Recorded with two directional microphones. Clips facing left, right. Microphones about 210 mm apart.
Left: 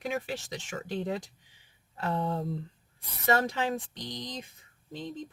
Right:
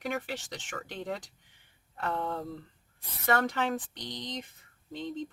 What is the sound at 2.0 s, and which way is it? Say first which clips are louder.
Speech: left 3 dB; 15° left (ahead or behind).